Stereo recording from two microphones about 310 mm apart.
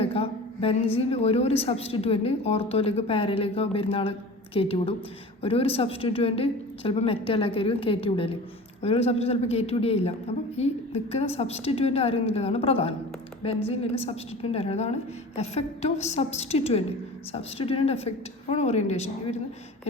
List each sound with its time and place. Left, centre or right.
0.0 s a woman's voice: centre